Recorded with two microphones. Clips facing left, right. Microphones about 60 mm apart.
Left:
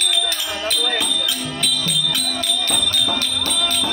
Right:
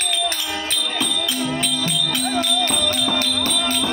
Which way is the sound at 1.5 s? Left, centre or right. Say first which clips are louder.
Right 1 dB; right.